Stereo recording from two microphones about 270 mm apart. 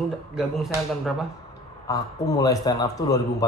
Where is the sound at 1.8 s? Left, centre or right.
Centre.